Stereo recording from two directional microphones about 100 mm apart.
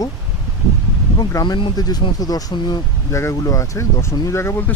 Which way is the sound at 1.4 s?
55° left (ahead or behind).